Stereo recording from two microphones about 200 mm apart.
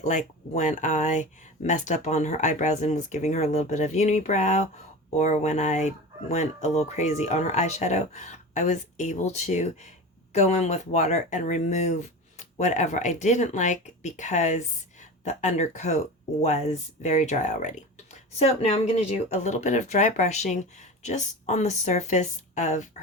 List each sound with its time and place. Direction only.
0.0 s speech: 35° left (ahead or behind)